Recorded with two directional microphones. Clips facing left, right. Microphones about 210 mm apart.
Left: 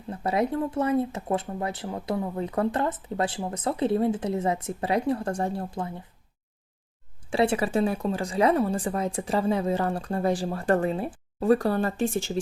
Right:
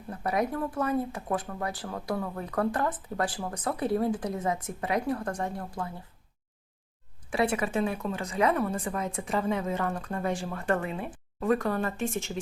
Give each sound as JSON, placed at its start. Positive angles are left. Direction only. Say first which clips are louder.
{"t": 0.1, "sound": "speech", "louder": "left 3 dB", "side_deg": 25}
{"t": 7.3, "sound": "a woman's voice", "louder": "left 4 dB", "side_deg": 30}